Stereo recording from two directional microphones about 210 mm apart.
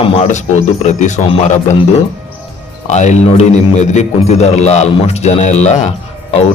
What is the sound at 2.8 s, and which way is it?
A man's voice, 35° left (ahead or behind).